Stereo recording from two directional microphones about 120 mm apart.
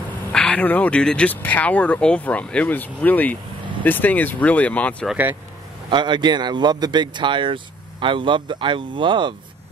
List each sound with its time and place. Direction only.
0.3 s speech: 10° left (ahead or behind)
5.9 s a man's voice: 40° right (ahead or behind)